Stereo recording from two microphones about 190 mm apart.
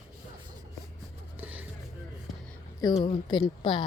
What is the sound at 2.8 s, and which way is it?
Speech, 25° left (ahead or behind).